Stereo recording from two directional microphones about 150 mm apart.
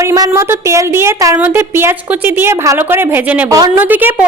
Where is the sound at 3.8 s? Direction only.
10° right (ahead or behind).